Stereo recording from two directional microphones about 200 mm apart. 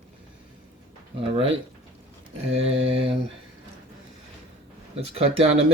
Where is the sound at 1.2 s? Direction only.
25° right (ahead or behind).